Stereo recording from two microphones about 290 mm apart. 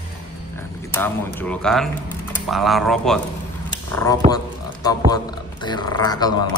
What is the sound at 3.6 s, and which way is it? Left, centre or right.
Speech, centre.